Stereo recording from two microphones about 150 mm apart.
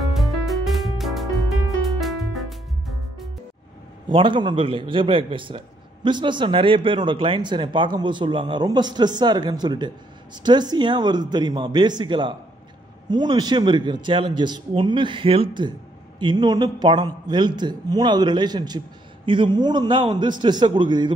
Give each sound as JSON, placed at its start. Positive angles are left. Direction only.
{"t": 0.1, "sound": "music", "side_deg": 0}
{"t": 4.1, "sound": "a man's voice", "side_deg": -30}